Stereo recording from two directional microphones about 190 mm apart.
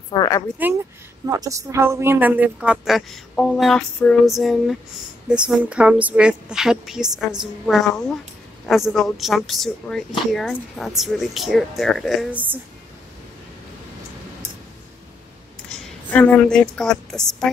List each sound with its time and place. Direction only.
0.1 s speech: 20° left (ahead or behind)
0.6 s a woman's voice: 10° right (ahead or behind)
16.1 s a woman's voice: 10° left (ahead or behind)